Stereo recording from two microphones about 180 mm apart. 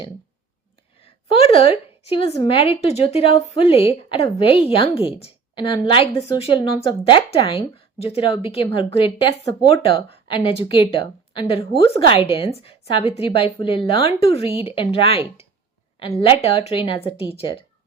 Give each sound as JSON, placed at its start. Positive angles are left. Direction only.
{"t": 1.3, "sound": "a woman's voice", "side_deg": 30}